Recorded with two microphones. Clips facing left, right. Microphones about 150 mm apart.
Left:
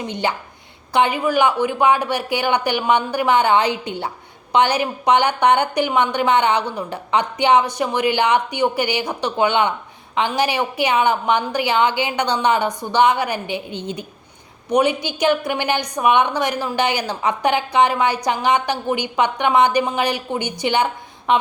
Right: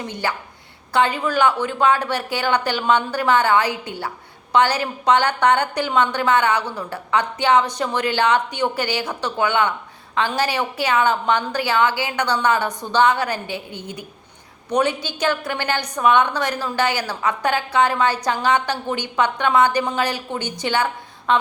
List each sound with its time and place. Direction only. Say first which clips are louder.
0.0 s a woman's voice: left 3 dB; 20° left (ahead or behind)